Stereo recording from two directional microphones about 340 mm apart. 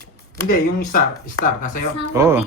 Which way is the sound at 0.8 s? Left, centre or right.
Left.